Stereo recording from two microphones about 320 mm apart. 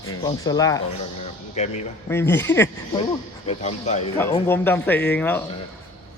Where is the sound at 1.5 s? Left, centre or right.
Left.